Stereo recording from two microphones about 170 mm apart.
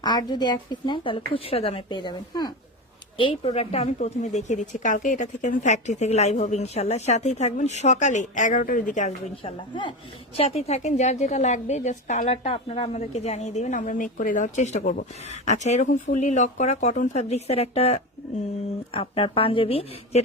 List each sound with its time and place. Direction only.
0.0 s a woman's voice: 25° left (ahead or behind)